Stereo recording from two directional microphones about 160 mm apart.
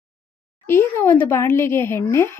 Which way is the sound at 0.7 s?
15° left (ahead or behind).